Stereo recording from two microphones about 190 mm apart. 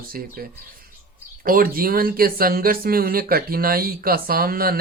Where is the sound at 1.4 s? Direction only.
50° right (ahead or behind).